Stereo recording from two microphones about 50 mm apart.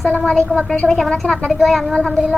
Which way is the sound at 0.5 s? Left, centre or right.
Left.